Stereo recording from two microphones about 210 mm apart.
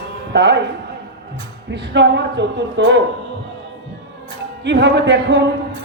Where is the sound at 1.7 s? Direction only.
55° right (ahead or behind).